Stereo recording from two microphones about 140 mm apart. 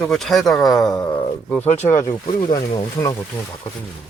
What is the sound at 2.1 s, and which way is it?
Speech, 35° left (ahead or behind).